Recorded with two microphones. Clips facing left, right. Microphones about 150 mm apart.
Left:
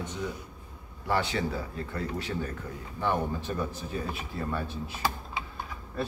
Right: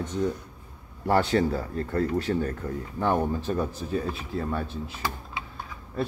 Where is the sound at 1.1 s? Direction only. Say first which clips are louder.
Right 6 dB; 45° right (ahead or behind).